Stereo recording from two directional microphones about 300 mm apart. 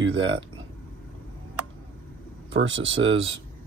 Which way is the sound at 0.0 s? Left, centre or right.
Right.